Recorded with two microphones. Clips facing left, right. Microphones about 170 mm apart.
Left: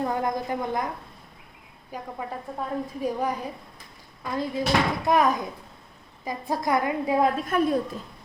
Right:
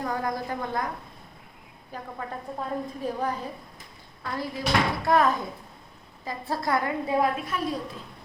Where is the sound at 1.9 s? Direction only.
10° left (ahead or behind).